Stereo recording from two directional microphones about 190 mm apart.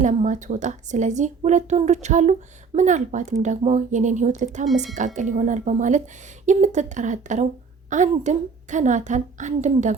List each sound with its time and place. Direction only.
0.0 s speech: 40° right (ahead or behind)